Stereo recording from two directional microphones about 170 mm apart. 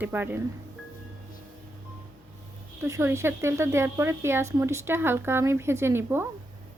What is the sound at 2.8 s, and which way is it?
Speech, 15° right (ahead or behind).